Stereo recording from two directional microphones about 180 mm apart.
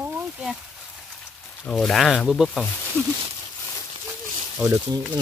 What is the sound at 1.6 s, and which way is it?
Speech, centre (ahead or behind).